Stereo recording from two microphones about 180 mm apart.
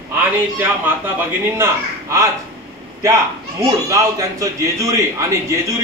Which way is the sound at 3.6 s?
20° right (ahead or behind).